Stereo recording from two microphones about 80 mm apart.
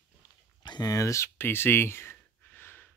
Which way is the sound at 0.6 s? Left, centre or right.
Left.